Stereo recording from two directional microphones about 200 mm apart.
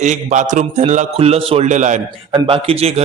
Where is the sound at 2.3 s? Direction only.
25° right (ahead or behind).